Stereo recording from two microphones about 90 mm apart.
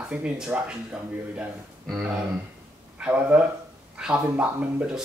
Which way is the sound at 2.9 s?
15° right (ahead or behind).